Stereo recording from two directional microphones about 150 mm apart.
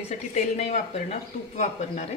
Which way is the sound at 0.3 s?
50° left (ahead or behind).